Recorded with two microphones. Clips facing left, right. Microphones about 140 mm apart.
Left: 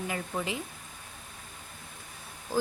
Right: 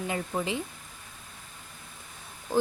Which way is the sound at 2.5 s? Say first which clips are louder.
Right 4 dB; 20° right (ahead or behind).